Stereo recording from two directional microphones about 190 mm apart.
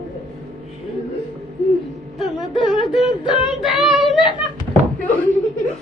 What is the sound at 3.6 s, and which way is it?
Child singing, centre (ahead or behind).